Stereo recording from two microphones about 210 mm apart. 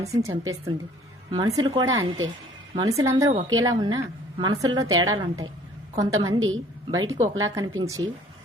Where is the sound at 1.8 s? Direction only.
70° right (ahead or behind).